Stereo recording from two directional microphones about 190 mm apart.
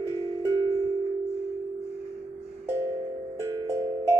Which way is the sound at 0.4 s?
15° right (ahead or behind).